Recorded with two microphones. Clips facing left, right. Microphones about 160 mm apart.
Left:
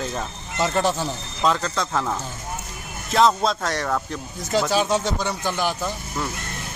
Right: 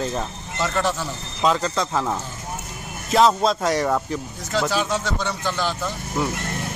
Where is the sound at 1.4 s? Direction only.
Centre (ahead or behind).